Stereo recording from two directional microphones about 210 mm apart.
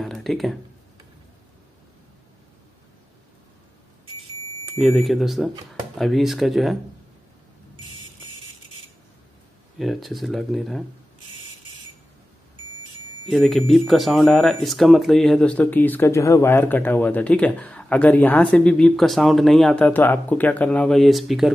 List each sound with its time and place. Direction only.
0.0 s a sound: centre (ahead or behind)
4.7 s speech: centre (ahead or behind)
9.8 s speech: centre (ahead or behind)
13.3 s speech: centre (ahead or behind)